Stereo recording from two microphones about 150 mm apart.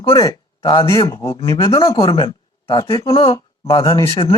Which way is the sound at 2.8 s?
20° left (ahead or behind).